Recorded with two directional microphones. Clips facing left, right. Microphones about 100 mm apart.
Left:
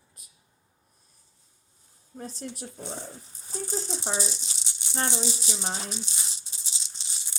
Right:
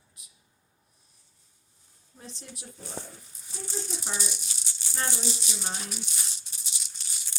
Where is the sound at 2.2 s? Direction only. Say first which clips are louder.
Left 7 dB; 40° left (ahead or behind).